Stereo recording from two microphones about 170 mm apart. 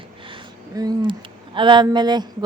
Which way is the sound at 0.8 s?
25° right (ahead or behind).